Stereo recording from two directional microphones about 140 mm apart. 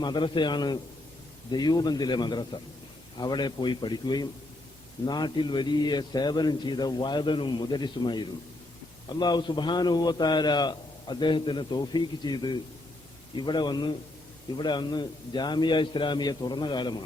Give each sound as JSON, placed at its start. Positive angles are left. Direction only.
{"t": 0.0, "sound": "a man's voice", "side_deg": 35}